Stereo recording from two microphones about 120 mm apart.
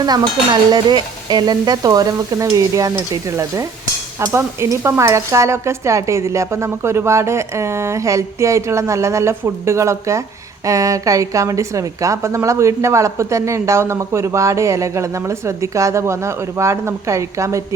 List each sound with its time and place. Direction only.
0.0 s stir: 35° right (ahead or behind)
4.3 s a woman's voice: 20° right (ahead or behind)